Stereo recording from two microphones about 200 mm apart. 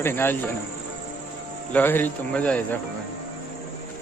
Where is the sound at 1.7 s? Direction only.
10° left (ahead or behind).